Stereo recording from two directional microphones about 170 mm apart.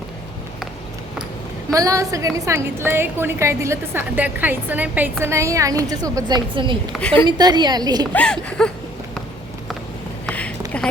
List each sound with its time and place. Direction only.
1.7 s a woman's voice: 20° right (ahead or behind)
8.1 s speech: 5° left (ahead or behind)
10.2 s a sound: 10° left (ahead or behind)